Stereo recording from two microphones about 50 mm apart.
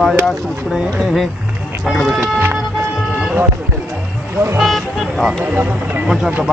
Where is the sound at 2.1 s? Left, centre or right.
Right.